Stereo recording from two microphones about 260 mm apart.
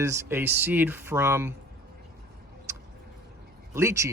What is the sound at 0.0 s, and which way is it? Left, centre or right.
Speech, centre.